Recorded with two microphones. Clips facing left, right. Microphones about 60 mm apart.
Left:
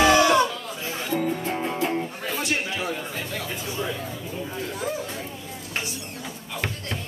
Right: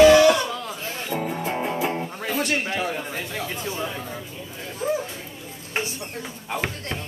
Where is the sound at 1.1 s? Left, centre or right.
Centre.